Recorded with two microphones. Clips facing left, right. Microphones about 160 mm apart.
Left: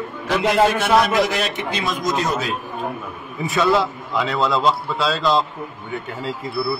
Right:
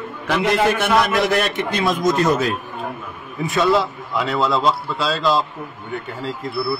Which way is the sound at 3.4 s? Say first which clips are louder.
Right 1 dB; centre (ahead or behind).